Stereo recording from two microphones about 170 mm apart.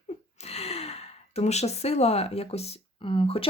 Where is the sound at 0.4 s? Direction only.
35° left (ahead or behind).